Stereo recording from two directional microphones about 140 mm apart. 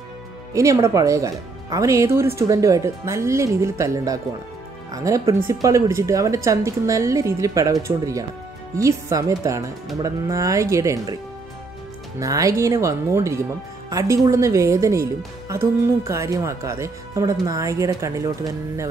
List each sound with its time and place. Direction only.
0.5 s speech: 25° right (ahead or behind)
12.2 s speech: 25° right (ahead or behind)